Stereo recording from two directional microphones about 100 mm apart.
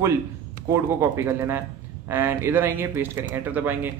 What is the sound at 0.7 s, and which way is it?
Speech, 25° right (ahead or behind).